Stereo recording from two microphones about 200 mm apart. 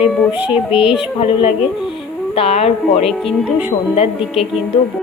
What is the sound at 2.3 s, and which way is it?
Speech, 30° left (ahead or behind).